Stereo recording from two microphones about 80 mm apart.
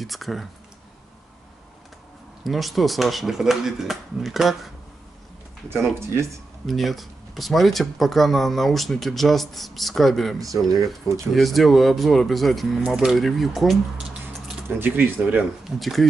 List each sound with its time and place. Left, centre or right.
0.0 s speech: centre
2.4 s speech: centre
6.6 s speech: centre
10.4 s speech: right
11.3 s speech: centre
14.8 s speech: centre
15.8 s speech: centre